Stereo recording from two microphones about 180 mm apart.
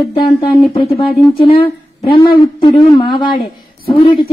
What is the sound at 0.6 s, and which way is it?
A woman's voice, 30° left (ahead or behind).